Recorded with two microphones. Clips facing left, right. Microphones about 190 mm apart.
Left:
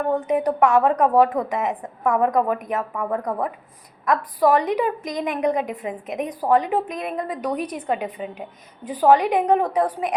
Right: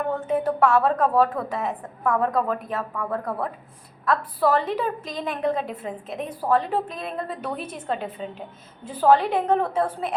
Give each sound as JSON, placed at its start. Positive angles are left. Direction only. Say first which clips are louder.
{"t": 0.1, "sound": "a woman's voice", "louder": "left 4 dB", "side_deg": 15}